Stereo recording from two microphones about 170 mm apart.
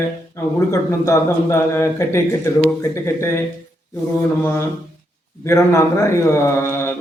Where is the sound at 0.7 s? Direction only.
15° left (ahead or behind).